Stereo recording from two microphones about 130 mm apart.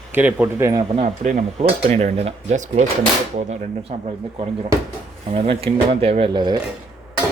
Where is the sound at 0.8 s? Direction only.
50° right (ahead or behind).